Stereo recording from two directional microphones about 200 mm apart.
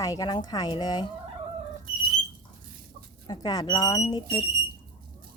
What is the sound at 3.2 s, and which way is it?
Speech, 20° left (ahead or behind).